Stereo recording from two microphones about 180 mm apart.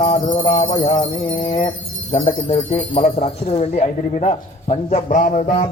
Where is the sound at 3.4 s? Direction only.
35° left (ahead or behind).